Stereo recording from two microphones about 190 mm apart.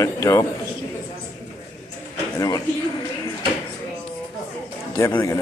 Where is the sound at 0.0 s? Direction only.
20° left (ahead or behind).